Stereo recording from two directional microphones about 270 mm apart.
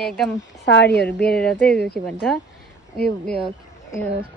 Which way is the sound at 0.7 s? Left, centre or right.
Left.